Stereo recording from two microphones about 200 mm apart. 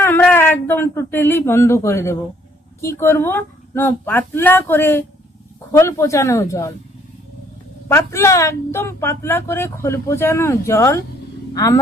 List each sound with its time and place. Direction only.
0.0 s a woman's voice: 10° left (ahead or behind)
7.9 s a woman's voice: 15° left (ahead or behind)